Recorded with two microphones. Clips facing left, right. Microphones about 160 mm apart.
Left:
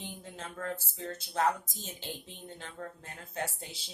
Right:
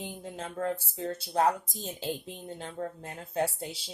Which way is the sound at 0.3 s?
30° right (ahead or behind).